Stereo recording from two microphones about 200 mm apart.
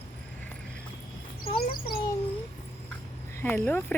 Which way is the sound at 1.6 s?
50° left (ahead or behind).